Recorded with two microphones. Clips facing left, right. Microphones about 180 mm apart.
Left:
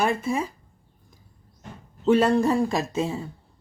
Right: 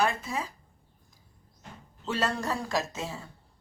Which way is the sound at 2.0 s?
55° left (ahead or behind).